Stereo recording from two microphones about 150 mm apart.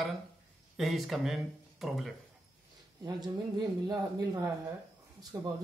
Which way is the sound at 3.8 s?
20° right (ahead or behind).